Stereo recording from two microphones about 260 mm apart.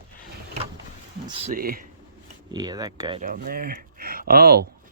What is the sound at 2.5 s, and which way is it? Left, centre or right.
Speech, centre.